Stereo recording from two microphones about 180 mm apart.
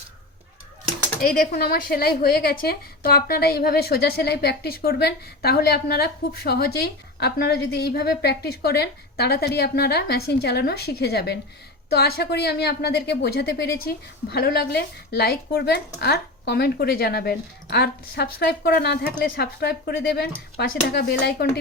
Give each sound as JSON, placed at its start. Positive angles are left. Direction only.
{"t": 1.3, "sound": "a woman's voice", "side_deg": 55}